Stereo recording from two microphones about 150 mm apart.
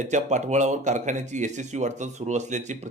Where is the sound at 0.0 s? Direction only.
55° right (ahead or behind).